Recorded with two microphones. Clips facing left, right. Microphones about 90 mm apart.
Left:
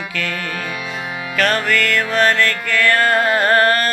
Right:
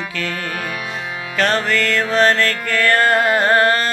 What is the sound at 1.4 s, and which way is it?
Music, 30° right (ahead or behind).